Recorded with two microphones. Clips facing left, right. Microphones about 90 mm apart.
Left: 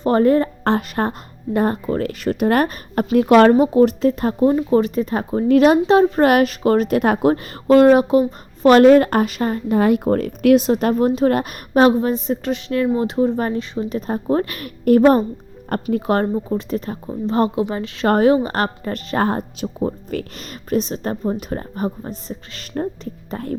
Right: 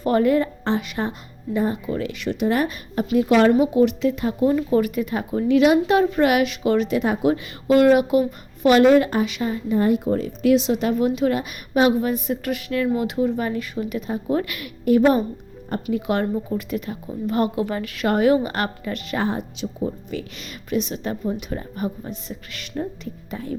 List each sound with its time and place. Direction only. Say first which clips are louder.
0.0 s a woman's voice: left 3 dB; 35° left (ahead or behind)
0.6 s speech: left 5 dB; 55° left (ahead or behind)
3.5 s speech: left 4 dB; 40° left (ahead or behind)
4.4 s speech: left 3 dB; 30° left (ahead or behind)
5.8 s speech: left 4 dB; 30° left (ahead or behind); by 7.8 s 50° left (ahead or behind)
7.8 s speech: left 3 dB; 35° left (ahead or behind)
8.6 s speech: left 4 dB; 45° left (ahead or behind)
9.7 s speech: left 3 dB; 75° left (ahead or behind)
10.0 s a woman's voice: left 4 dB; 55° left (ahead or behind)